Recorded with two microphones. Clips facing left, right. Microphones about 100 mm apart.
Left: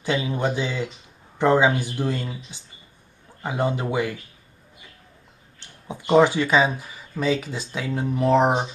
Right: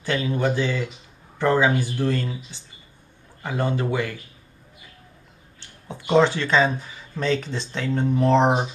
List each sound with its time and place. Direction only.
0.0 s speech: 15° left (ahead or behind)
5.9 s speech: 10° left (ahead or behind)